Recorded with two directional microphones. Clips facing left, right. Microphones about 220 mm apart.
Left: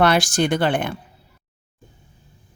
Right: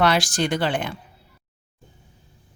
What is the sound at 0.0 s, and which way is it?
Speech, 50° left (ahead or behind).